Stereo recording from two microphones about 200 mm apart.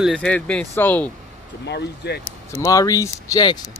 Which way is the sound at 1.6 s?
55° left (ahead or behind).